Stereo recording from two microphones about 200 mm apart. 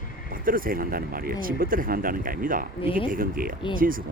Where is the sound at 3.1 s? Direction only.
45° right (ahead or behind).